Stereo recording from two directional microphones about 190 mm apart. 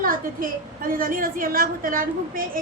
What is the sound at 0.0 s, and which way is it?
A woman's voice, 45° right (ahead or behind).